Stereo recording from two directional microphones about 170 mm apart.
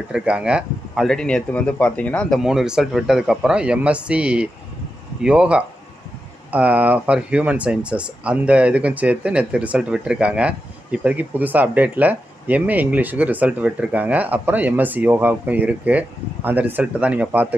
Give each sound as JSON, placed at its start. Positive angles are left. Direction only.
{"t": 0.1, "sound": "speech", "side_deg": -5}